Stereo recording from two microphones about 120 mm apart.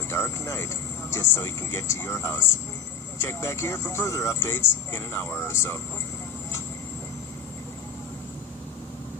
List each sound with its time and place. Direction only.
0.1 s music: 20° left (ahead or behind)
1.1 s speech: 20° left (ahead or behind)